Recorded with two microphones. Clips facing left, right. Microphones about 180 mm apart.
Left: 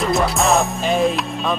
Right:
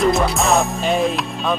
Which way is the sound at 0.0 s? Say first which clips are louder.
Right 1 dB; centre (ahead or behind).